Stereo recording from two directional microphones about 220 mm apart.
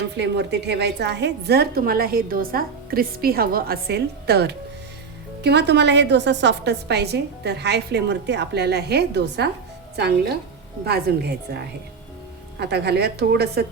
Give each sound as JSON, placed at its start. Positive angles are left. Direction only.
{"t": 0.2, "sound": "a woman's voice", "side_deg": -50}